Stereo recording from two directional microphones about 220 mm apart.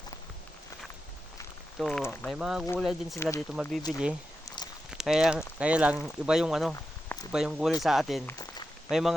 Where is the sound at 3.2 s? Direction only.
10° left (ahead or behind).